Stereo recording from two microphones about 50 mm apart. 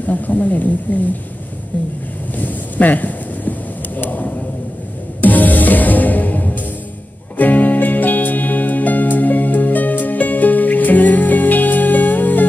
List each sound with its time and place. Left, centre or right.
0.0 s speech: left
2.3 s a sound: left
5.2 s music: left